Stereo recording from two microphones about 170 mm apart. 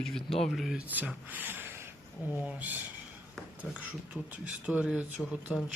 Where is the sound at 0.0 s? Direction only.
Centre (ahead or behind).